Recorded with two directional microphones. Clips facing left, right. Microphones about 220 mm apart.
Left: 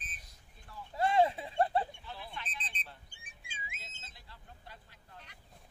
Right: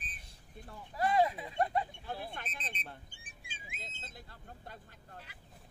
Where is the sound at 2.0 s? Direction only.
50° right (ahead or behind).